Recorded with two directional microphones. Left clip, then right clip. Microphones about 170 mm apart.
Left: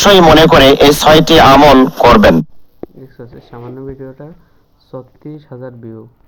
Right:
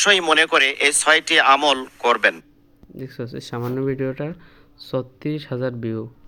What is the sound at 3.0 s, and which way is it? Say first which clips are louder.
Speech: right 2 dB; 40° right (ahead or behind).